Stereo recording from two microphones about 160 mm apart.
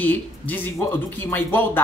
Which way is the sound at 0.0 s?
10° left (ahead or behind).